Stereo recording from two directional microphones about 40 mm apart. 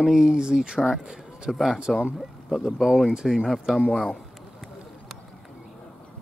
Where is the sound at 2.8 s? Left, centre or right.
Centre.